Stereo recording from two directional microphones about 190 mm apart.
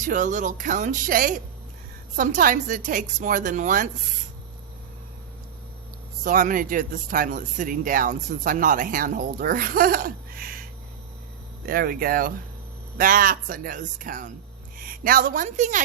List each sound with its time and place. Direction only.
0.0 s speech: 40° right (ahead or behind)
6.2 s speech: 45° right (ahead or behind)